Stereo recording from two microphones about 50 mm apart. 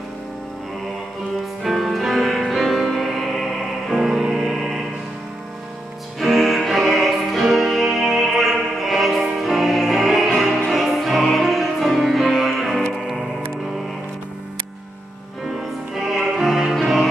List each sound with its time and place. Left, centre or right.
1.6 s music: centre
6.1 s music: centre
15.4 s music: centre